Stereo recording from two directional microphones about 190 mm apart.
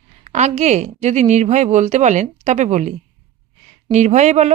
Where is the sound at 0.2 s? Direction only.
35° right (ahead or behind).